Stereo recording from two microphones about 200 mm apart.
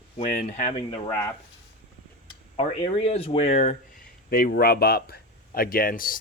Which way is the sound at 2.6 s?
30° left (ahead or behind).